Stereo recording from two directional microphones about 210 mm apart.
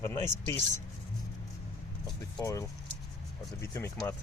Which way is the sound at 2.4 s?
15° left (ahead or behind).